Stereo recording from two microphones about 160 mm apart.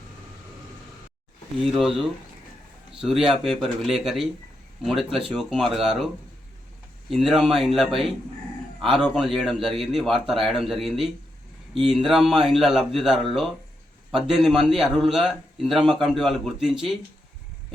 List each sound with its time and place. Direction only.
1.6 s a man's voice: centre (ahead or behind)
7.1 s a man's voice: centre (ahead or behind)
14.3 s a man's voice: 5° right (ahead or behind)